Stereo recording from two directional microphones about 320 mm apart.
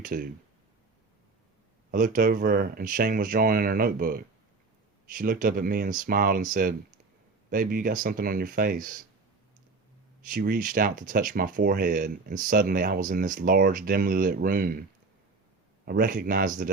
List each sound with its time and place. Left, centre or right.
0.0 s speech: right
1.9 s speech: right
10.2 s speech: right
15.9 s speech: right